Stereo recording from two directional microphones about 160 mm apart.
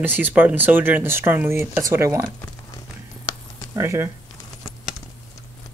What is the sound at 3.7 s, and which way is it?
Speech, 15° right (ahead or behind).